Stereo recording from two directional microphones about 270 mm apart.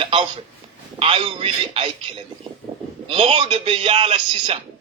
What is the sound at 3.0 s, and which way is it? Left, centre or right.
Speech, centre.